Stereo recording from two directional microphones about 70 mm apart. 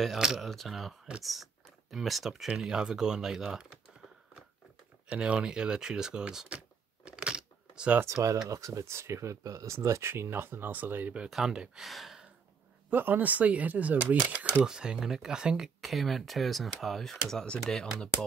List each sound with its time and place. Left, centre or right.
0.2 s speech: centre
5.1 s speech: centre
7.1 s a sound: centre
8.0 s speech: right
11.2 s speech: centre
12.9 s speech: right; by 18.1 s centre